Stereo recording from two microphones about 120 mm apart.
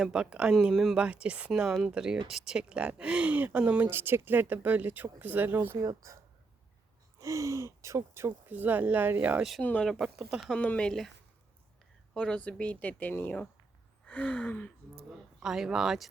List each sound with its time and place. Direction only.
0.0 s speech: 5° right (ahead or behind)
0.9 s speech: 10° right (ahead or behind)
5.7 s speech: 30° right (ahead or behind)
7.2 s speech: 25° right (ahead or behind)
9.6 s speech: 10° left (ahead or behind)
9.9 s speech: centre (ahead or behind)
10.6 s speech: 10° left (ahead or behind)
12.1 s speech: 10° left (ahead or behind)
15.4 s speech: 5° right (ahead or behind)